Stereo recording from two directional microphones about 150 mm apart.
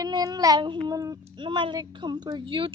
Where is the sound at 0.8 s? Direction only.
25° right (ahead or behind).